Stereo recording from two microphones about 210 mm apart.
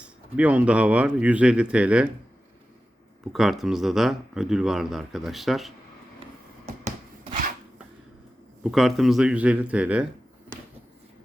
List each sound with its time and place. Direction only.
0.0 s speech: 5° right (ahead or behind)
3.3 s speech: centre (ahead or behind)
6.7 s wood: 35° right (ahead or behind)
8.6 s speech: centre (ahead or behind)